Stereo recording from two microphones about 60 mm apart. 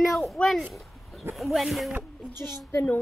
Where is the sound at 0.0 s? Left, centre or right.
Centre.